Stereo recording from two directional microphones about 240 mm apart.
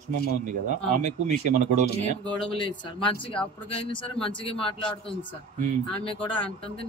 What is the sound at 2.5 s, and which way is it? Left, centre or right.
Speech, centre.